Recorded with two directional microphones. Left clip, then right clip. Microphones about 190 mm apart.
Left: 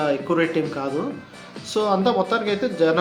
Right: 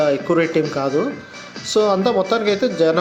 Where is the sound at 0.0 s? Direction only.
25° right (ahead or behind).